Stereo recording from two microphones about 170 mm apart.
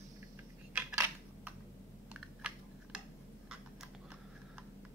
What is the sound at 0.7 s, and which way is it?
Cutlery, 10° right (ahead or behind).